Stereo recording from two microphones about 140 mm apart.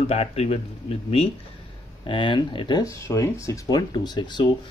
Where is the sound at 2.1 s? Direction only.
35° left (ahead or behind).